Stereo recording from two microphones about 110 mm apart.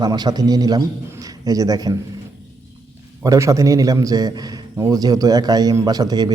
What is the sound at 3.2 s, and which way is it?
A man's voice, 25° right (ahead or behind).